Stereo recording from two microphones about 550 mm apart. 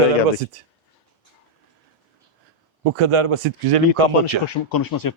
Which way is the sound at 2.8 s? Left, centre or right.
Right.